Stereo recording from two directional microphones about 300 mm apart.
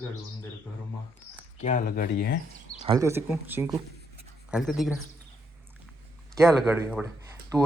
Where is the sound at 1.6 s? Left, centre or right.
Left.